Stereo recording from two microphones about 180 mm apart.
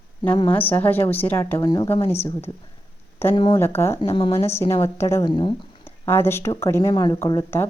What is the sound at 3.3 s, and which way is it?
Speech, 30° left (ahead or behind).